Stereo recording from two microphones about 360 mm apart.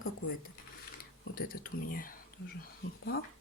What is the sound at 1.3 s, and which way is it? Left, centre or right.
Speech, left.